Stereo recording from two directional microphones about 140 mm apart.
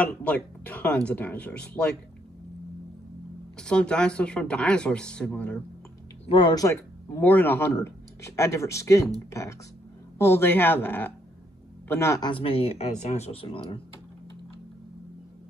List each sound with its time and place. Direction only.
0.0 s speech: 10° left (ahead or behind)
3.5 s speech: 5° left (ahead or behind)
6.2 s speech: 30° left (ahead or behind)
7.2 s speech: 15° left (ahead or behind)
12.3 s speech: 40° left (ahead or behind)